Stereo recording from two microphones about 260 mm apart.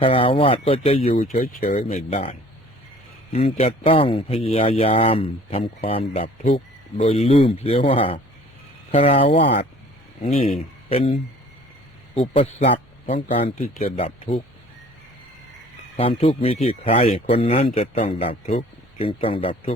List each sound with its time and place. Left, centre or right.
0.0 s speech: centre
3.3 s speech: left
10.5 s a man's voice: left
12.1 s speech: left
16.0 s speech: left